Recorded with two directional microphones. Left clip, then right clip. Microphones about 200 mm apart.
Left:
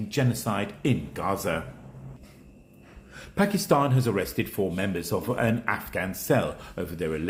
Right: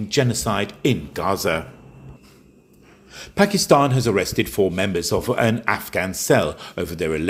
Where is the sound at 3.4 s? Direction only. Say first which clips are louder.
Right 7 dB; 25° right (ahead or behind).